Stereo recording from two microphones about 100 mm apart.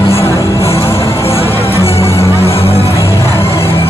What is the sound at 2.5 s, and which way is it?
Music, 80° left.